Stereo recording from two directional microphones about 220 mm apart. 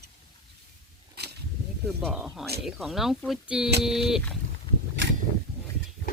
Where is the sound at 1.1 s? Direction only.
45° right (ahead or behind).